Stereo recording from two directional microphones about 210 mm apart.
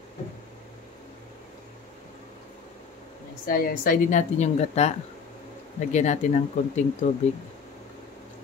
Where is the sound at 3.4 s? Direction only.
45° left (ahead or behind).